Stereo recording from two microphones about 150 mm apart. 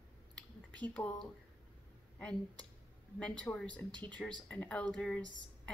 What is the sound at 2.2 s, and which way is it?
A woman's voice, 10° left (ahead or behind).